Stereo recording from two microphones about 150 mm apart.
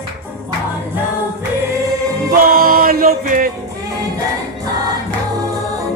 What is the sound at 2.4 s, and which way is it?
Music, 75° right (ahead or behind).